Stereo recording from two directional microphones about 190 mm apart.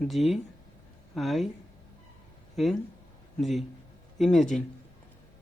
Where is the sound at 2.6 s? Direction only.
Centre (ahead or behind).